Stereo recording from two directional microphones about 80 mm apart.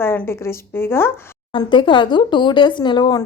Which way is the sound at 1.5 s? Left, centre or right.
Left.